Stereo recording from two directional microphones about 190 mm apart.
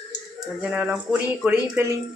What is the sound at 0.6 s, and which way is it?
Speech, 5° right (ahead or behind).